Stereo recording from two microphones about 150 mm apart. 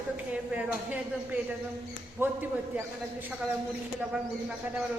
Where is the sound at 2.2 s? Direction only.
15° right (ahead or behind).